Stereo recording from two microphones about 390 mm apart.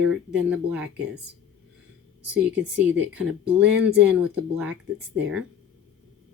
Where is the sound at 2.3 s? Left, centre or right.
Centre.